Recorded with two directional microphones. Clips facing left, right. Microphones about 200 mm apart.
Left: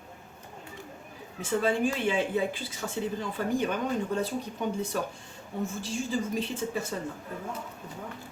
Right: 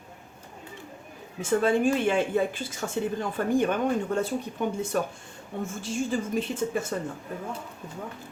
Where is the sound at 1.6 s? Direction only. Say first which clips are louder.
Right 4 dB; 50° right (ahead or behind).